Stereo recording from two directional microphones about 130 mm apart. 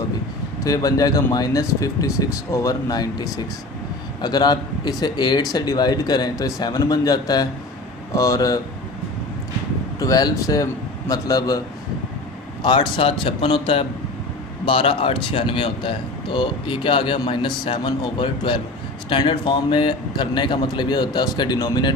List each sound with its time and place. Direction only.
0.6 s speech: 25° left (ahead or behind)
10.0 s speech: 30° left (ahead or behind)
12.6 s speech: 40° left (ahead or behind)